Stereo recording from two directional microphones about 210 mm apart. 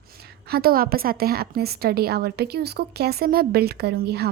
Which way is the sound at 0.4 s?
45° right (ahead or behind).